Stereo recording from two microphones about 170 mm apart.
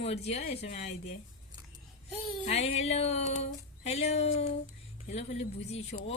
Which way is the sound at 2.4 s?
40° left (ahead or behind).